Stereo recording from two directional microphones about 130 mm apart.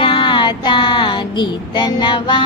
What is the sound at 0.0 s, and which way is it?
Child singing, 40° left (ahead or behind).